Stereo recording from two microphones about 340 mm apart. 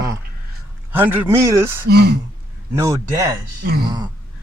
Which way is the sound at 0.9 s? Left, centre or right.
Centre.